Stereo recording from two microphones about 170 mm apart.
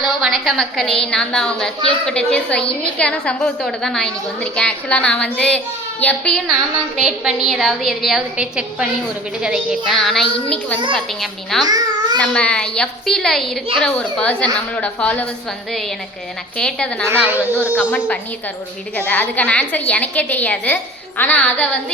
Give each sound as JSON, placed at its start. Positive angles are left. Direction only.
{"t": 0.0, "sound": "a woman's voice", "side_deg": 0}
{"t": 11.6, "sound": "babbling", "side_deg": -25}
{"t": 12.1, "sound": "a woman's voice", "side_deg": 5}
{"t": 16.6, "sound": "a woman's voice", "side_deg": 5}
{"t": 17.1, "sound": "a woman's voice", "side_deg": -10}
{"t": 18.9, "sound": "a woman's voice", "side_deg": 10}